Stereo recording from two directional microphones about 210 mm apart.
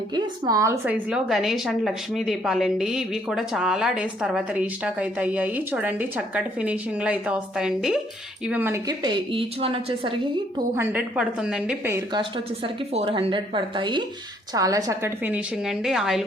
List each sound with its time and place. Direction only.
0.1 s a woman's voice: 20° right (ahead or behind)
10.8 s a woman's voice: 10° right (ahead or behind)
12.6 s a woman's voice: 30° right (ahead or behind); by 16.2 s centre (ahead or behind)